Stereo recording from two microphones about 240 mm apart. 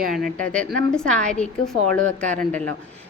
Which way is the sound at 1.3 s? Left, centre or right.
Centre.